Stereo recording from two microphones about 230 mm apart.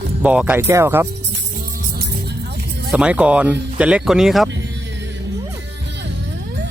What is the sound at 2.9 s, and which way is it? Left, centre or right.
Speech, centre.